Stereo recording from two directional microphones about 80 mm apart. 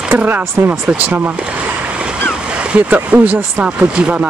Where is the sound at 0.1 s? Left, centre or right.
Right.